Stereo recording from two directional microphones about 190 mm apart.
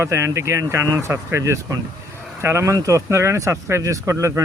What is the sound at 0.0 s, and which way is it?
Speech, 15° right (ahead or behind).